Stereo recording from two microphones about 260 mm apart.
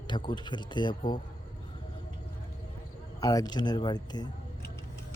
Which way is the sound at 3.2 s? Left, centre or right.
Centre.